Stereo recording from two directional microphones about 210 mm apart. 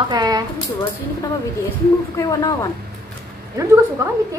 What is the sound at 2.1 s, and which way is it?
Speech, 15° left (ahead or behind).